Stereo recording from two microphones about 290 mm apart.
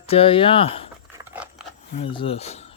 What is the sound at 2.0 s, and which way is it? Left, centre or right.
Speech, centre.